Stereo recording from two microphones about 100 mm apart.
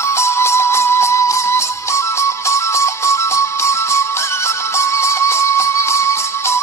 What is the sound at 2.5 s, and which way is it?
Music, 30° left (ahead or behind).